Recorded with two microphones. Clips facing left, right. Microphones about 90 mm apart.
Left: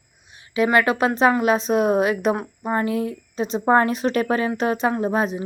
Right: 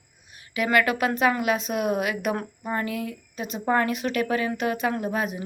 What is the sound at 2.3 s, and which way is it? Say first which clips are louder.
Speech: left 5 dB; 20° left (ahead or behind).